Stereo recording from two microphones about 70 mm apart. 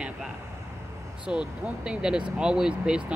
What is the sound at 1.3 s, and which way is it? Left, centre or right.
Speech, right.